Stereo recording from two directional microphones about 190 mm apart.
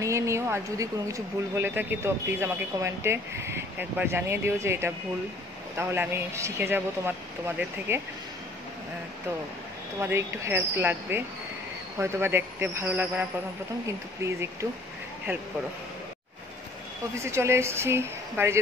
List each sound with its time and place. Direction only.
0.0 s speech: 15° right (ahead or behind)
9.9 s speech: 15° right (ahead or behind)
17.2 s speech: 15° right (ahead or behind)